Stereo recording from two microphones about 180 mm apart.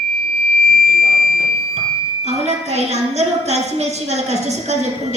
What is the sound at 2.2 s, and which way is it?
A woman's voice, 35° right (ahead or behind).